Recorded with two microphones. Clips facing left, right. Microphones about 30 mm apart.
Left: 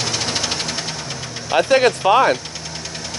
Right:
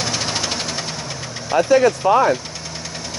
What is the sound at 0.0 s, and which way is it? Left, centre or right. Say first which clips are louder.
Engine: even; centre.